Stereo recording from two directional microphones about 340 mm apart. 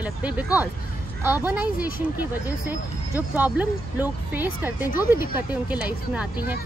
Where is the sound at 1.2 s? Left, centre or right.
Centre.